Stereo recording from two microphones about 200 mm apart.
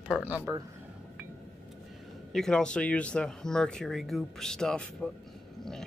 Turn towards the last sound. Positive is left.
turn(degrees=5)  # may be behind; listen again after turning